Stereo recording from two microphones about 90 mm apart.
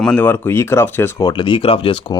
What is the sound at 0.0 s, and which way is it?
Speech, 10° left (ahead or behind).